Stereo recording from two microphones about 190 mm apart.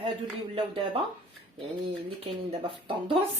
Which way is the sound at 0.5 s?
30° right (ahead or behind).